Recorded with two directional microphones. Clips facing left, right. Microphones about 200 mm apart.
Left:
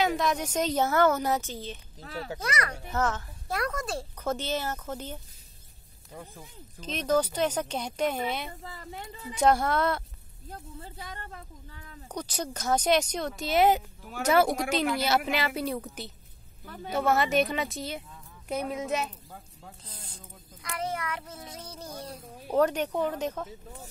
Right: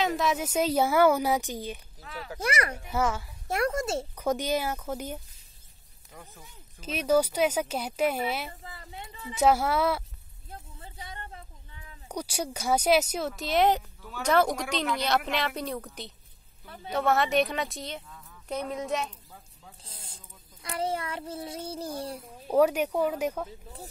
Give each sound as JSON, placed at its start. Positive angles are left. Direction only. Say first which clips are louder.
{"t": 0.0, "sound": "a woman's voice", "louder": "even", "side_deg": 0}
{"t": 2.0, "sound": "speech", "louder": "left 3 dB", "side_deg": 40}
{"t": 2.4, "sound": "speech", "louder": "right 5 dB", "side_deg": -30}
{"t": 2.9, "sound": "a woman's voice", "louder": "even", "side_deg": -10}
{"t": 3.4, "sound": "speech", "louder": "right 4 dB", "side_deg": -25}
{"t": 4.2, "sound": "a woman's voice", "louder": "right 3 dB", "side_deg": -15}
{"t": 6.1, "sound": "speech", "louder": "left 5 dB", "side_deg": 30}
{"t": 6.8, "sound": "a woman's voice", "louder": "right 2 dB", "side_deg": -10}
{"t": 12.1, "sound": "a woman's voice", "louder": "right 1 dB", "side_deg": -10}
{"t": 19.8, "sound": "speech", "louder": "left 3 dB", "side_deg": -25}
{"t": 22.5, "sound": "a woman's voice", "louder": "right 2 dB", "side_deg": -10}